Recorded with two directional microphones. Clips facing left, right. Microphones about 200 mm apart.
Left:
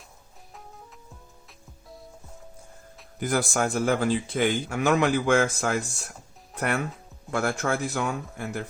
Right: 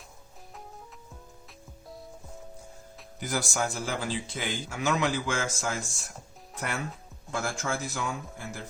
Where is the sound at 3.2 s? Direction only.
55° left (ahead or behind).